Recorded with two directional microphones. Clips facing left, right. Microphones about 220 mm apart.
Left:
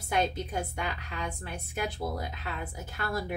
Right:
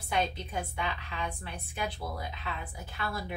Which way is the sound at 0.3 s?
45° left (ahead or behind).